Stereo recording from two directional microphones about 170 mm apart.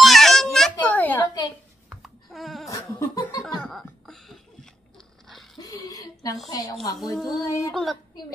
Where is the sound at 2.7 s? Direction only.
20° left (ahead or behind).